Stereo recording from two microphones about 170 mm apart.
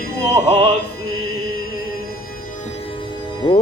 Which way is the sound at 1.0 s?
65° left (ahead or behind).